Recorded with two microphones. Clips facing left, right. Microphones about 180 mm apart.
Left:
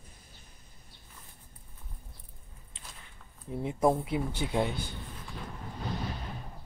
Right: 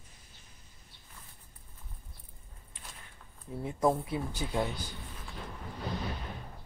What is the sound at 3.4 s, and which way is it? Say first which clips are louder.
Speech: left 2 dB; 20° left (ahead or behind).